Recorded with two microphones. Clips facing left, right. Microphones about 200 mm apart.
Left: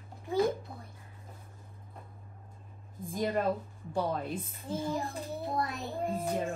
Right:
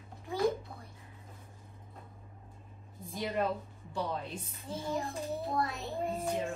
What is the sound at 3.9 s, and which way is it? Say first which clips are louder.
Speech: left 4 dB; 50° left (ahead or behind).